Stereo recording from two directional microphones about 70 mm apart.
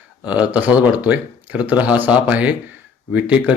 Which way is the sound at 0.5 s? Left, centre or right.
Centre.